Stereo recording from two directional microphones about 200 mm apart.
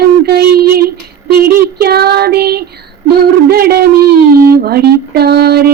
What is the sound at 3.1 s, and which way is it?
Owl, 50° right (ahead or behind).